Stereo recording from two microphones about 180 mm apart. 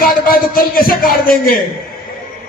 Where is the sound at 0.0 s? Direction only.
55° left (ahead or behind).